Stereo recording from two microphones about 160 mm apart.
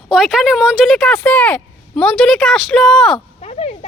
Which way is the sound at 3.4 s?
40° left (ahead or behind).